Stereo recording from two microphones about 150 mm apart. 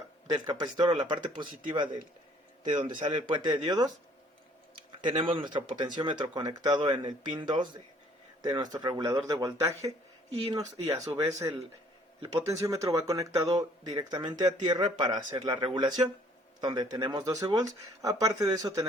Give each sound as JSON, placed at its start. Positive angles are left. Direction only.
{"t": 0.3, "sound": "speech", "side_deg": -30}
{"t": 5.0, "sound": "speech", "side_deg": -35}